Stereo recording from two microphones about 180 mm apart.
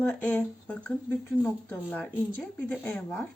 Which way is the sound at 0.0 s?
10° left (ahead or behind).